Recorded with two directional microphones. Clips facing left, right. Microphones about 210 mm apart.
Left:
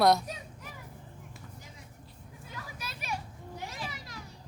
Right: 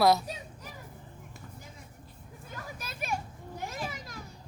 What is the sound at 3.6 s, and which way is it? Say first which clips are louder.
Children playing: right 4 dB; 50° right (ahead or behind).